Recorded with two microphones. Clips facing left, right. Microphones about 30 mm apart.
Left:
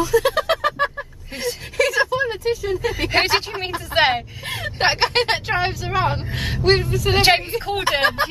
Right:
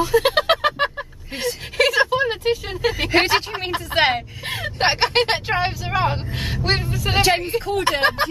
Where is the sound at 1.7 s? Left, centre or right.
Right.